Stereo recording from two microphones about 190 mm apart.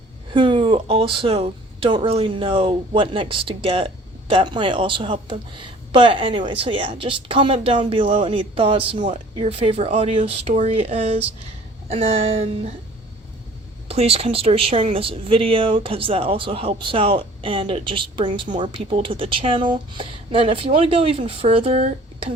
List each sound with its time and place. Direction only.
0.3 s speech: 25° right (ahead or behind)
13.8 s speech: 30° right (ahead or behind)